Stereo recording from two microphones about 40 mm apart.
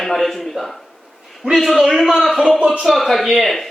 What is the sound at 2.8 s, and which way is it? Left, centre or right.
Speech, centre.